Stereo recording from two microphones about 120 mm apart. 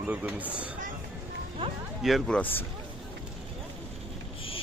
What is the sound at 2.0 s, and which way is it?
Speech, centre (ahead or behind).